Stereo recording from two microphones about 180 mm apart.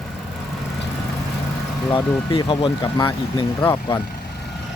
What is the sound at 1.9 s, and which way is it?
Speech, 30° left (ahead or behind).